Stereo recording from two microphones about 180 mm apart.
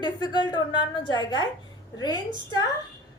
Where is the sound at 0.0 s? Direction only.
25° left (ahead or behind).